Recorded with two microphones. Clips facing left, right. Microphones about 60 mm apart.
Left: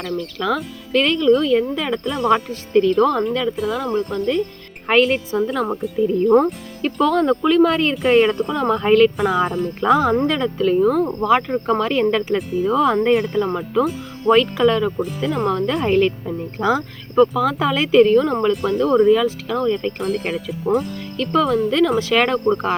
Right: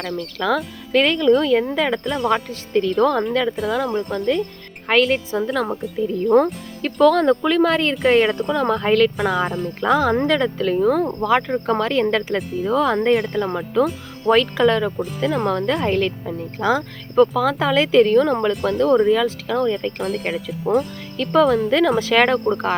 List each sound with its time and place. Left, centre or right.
0.2 s speech: centre
11.2 s speech: centre
12.1 s speech: centre
15.9 s speech: centre
16.6 s speech: centre
17.2 s speech: centre